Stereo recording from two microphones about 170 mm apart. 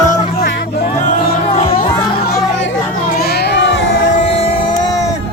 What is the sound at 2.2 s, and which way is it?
Chatter, 75° left (ahead or behind).